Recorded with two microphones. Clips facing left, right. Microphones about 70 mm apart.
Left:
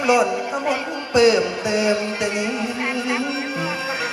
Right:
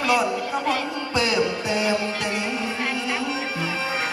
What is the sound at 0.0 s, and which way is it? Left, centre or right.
Music, centre.